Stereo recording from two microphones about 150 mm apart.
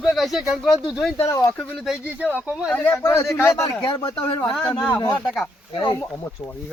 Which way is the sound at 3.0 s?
20° left (ahead or behind).